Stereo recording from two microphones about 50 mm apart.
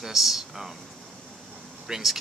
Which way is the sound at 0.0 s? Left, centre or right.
Centre.